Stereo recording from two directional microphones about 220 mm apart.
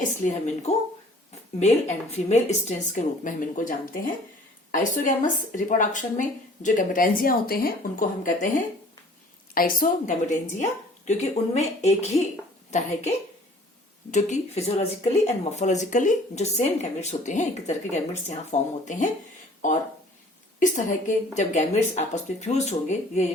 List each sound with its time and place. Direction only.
0.3 s speech: 30° left (ahead or behind)
20.6 s speech: 35° left (ahead or behind)